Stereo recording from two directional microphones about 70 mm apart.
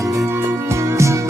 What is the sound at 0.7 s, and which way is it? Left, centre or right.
Music, right.